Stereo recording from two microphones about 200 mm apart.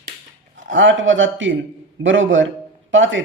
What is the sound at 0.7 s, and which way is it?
Speech, 70° right (ahead or behind).